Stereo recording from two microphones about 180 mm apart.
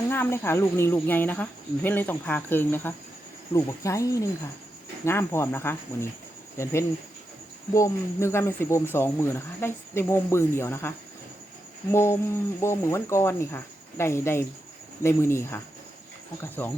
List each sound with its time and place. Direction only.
0.1 s speech: 15° left (ahead or behind)
7.7 s speech: 15° left (ahead or behind)